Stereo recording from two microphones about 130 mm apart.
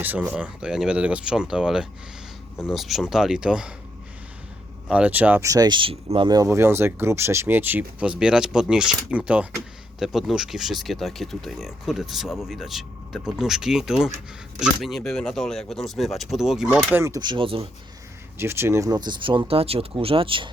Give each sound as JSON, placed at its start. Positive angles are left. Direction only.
{"t": 0.3, "sound": "speech", "side_deg": -10}
{"t": 4.9, "sound": "speech", "side_deg": -10}
{"t": 5.5, "sound": "speech", "side_deg": -30}
{"t": 6.2, "sound": "speech", "side_deg": -25}
{"t": 16.6, "sound": "speech", "side_deg": -15}
{"t": 17.1, "sound": "speech", "side_deg": -35}
{"t": 18.3, "sound": "speech", "side_deg": -20}